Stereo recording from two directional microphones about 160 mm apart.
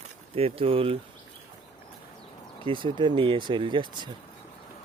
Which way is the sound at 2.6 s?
30° right (ahead or behind).